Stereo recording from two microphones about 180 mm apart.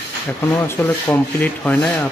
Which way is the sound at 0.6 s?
15° left (ahead or behind).